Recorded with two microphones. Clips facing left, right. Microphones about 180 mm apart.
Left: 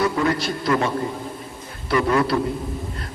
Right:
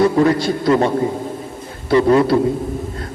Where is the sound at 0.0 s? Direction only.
25° right (ahead or behind).